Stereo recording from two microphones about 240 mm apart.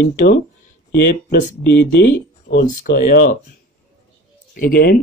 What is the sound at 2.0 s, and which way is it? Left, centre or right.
Speech, left.